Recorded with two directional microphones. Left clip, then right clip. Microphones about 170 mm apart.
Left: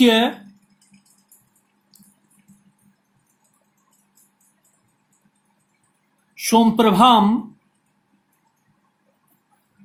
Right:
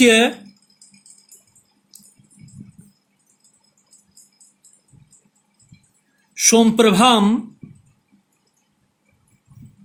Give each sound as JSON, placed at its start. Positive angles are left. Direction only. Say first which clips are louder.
{"t": 0.0, "sound": "speech", "louder": "right 3 dB", "side_deg": -45}
{"t": 6.3, "sound": "speech", "louder": "right 2 dB", "side_deg": -45}